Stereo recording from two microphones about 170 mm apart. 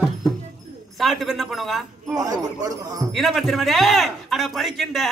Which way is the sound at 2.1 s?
20° right (ahead or behind).